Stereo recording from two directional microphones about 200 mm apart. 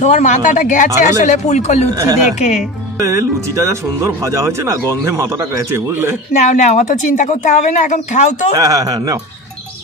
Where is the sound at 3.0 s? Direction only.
15° right (ahead or behind).